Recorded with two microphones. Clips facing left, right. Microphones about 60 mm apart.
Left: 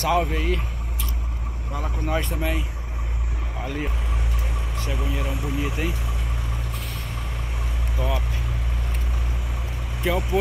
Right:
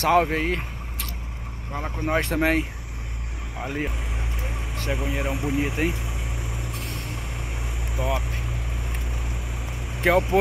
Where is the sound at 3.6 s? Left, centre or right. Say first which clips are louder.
Right 1 dB; centre.